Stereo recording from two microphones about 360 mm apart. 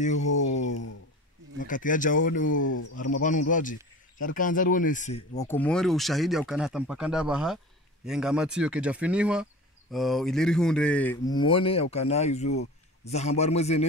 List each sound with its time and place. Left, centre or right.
0.0 s speech: centre
0.4 s a sound: left
1.6 s speech: left
5.5 s speech: centre